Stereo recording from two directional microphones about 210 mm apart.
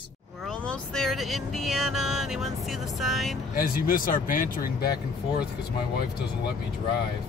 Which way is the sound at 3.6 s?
40° left (ahead or behind).